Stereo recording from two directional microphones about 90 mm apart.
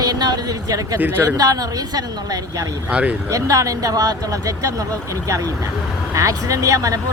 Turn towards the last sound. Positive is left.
turn(degrees=-40)  # may be behind; listen again after turning